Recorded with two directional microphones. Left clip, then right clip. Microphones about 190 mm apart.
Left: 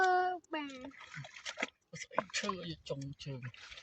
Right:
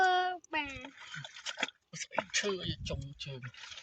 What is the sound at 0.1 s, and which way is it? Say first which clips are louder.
Child singing: right 1 dB; 25° left (ahead or behind).